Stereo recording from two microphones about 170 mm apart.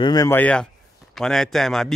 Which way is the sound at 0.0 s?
20° left (ahead or behind).